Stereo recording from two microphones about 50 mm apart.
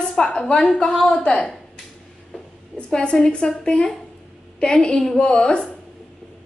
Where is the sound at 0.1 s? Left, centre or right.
Centre.